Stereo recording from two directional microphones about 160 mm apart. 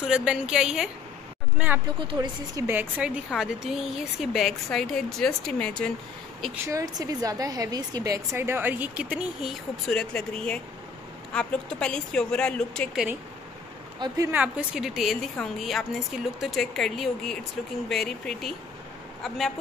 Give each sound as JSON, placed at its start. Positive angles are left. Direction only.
{"t": 0.0, "sound": "a woman's voice", "side_deg": -5}
{"t": 2.0, "sound": "a woman's voice", "side_deg": -30}
{"t": 6.6, "sound": "a woman's voice", "side_deg": -20}
{"t": 13.9, "sound": "a woman's voice", "side_deg": -25}
{"t": 14.3, "sound": "a woman's voice", "side_deg": -5}